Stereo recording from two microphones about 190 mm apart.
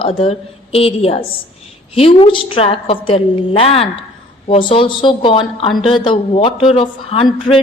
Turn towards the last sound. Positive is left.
turn(degrees=30)  # may be behind; listen again after turning